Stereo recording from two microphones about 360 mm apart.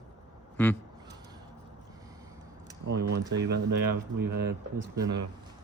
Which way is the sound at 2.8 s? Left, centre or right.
Right.